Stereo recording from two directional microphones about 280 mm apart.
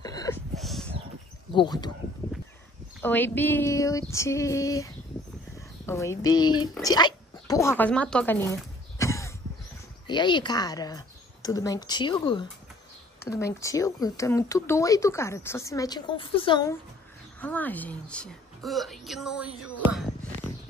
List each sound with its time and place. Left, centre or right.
0.0 s a sound: centre
0.6 s dog: centre
1.5 s speech: centre
3.0 s speech: centre
17.4 s a woman's voice: centre